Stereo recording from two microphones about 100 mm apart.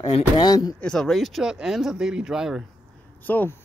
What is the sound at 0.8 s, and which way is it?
Speech, 5° left (ahead or behind).